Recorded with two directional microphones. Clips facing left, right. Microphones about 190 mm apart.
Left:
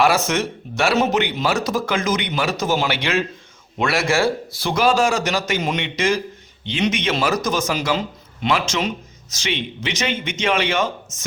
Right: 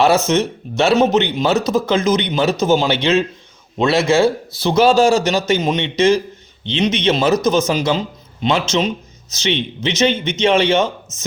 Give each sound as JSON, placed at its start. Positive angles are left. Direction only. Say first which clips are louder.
{"t": 0.0, "sound": "speech", "louder": "right 4 dB", "side_deg": -25}